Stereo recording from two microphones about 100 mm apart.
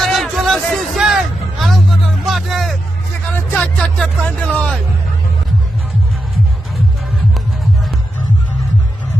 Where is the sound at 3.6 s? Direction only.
15° left (ahead or behind).